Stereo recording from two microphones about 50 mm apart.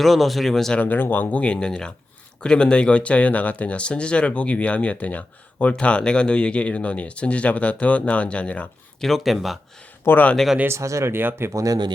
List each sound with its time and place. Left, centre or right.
0.0 s speech: centre
0.8 s speech: left
1.5 s speech: centre
9.0 s speech: centre
10.1 s speech: left
10.7 s speech: right
11.1 s speech: right